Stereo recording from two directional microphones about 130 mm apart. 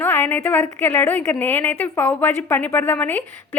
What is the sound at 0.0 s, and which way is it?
A woman's voice, 15° left (ahead or behind).